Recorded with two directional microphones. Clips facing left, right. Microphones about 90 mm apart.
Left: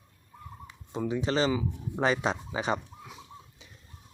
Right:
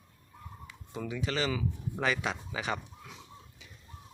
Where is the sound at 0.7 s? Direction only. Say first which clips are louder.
Left 7 dB; 25° left (ahead or behind).